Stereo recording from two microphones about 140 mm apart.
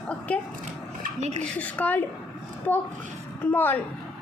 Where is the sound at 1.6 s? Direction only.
10° left (ahead or behind).